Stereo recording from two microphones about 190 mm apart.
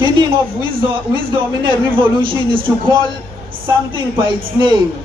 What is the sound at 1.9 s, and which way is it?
A man's voice, 25° right (ahead or behind).